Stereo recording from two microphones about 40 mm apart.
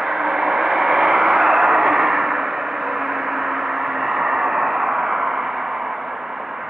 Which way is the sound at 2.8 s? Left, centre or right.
Right.